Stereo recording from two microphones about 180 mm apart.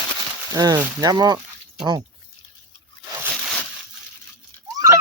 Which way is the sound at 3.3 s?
Centre (ahead or behind).